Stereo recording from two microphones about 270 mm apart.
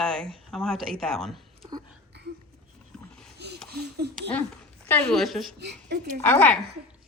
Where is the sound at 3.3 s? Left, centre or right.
Right.